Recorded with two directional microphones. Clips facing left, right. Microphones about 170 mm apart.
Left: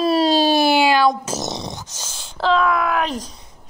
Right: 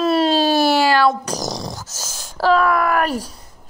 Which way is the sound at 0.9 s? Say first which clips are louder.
Even; 20° left (ahead or behind).